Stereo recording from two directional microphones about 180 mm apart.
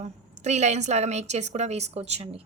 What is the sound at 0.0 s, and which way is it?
A woman's voice, 40° right (ahead or behind).